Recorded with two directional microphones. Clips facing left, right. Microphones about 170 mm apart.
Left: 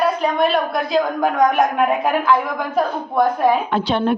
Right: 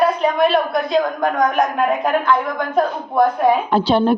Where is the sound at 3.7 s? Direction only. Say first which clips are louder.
Right 3 dB; 35° right (ahead or behind).